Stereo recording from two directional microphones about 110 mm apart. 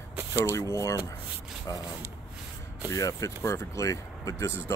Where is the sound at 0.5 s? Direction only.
25° left (ahead or behind).